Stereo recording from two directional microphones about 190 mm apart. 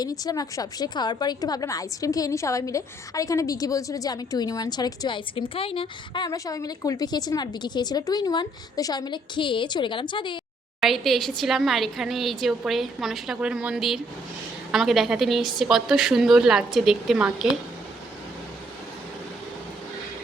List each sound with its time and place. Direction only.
0.0 s a woman's voice: 20° left (ahead or behind)
10.8 s speech: centre (ahead or behind)